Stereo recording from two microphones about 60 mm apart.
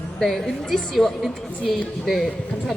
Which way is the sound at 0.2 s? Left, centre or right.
Centre.